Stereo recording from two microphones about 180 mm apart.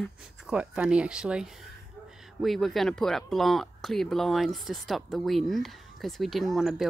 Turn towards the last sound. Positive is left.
turn(degrees=0)  # may be behind; listen again after turning